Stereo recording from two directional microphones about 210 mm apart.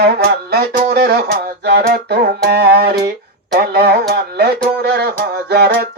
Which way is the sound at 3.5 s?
50° right (ahead or behind).